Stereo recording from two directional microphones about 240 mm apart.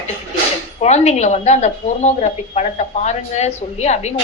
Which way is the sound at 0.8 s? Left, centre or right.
Left.